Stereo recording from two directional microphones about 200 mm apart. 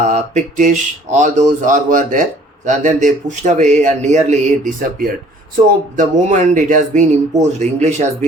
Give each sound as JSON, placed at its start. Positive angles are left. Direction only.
{"t": 0.0, "sound": "a man's voice", "side_deg": -35}